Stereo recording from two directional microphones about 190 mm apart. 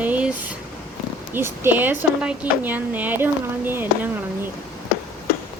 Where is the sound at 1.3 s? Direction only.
10° right (ahead or behind).